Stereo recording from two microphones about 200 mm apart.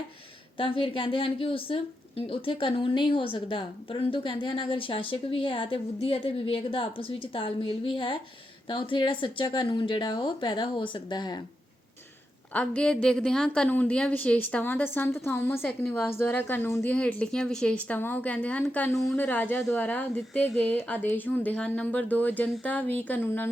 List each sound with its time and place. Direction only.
0.5 s a woman's voice: 25° left (ahead or behind)
12.5 s a woman's voice: 5° left (ahead or behind)